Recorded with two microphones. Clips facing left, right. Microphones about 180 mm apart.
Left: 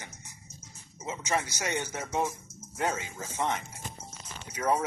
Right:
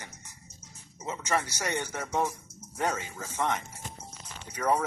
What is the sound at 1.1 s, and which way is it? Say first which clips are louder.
Speech: right 1 dB; 15° left (ahead or behind).